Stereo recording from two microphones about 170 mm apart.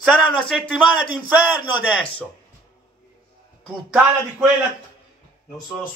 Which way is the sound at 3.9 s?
5° right (ahead or behind).